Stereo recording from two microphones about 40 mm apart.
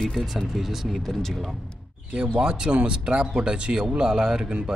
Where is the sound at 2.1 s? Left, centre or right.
Right.